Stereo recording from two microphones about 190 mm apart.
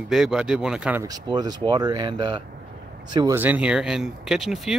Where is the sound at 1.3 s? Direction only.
20° right (ahead or behind).